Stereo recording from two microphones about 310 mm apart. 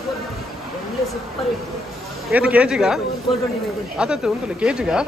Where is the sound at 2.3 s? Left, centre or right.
Centre.